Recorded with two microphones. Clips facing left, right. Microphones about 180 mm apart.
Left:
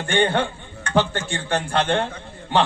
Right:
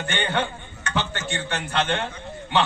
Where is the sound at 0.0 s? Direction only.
35° left (ahead or behind).